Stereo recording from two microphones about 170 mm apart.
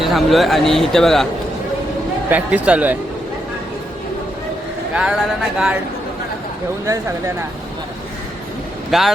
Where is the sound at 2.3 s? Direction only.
10° right (ahead or behind).